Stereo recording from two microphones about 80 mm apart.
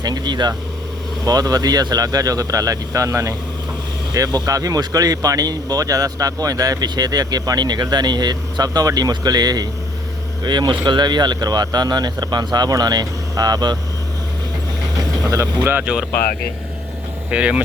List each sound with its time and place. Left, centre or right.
0.0 s speech: right
1.2 s speech: right
4.1 s speech: right
10.4 s speech: right
15.8 s speech: centre
17.3 s speech: centre